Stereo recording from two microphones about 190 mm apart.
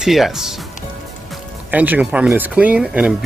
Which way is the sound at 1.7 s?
10° right (ahead or behind).